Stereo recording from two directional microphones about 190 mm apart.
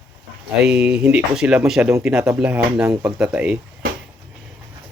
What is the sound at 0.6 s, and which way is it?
Speech, 5° right (ahead or behind).